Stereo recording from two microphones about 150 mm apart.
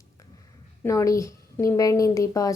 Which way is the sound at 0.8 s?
20° left (ahead or behind).